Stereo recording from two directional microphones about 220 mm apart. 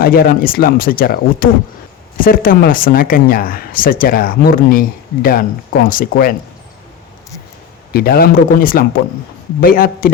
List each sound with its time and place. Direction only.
0.0 s speech: 40° left (ahead or behind)
7.9 s speech: 45° left (ahead or behind)